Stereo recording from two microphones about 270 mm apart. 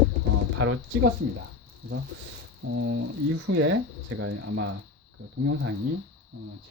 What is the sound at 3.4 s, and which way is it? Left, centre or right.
Speech, right.